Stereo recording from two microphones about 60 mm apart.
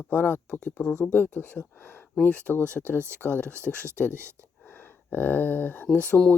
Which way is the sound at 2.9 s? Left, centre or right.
Right.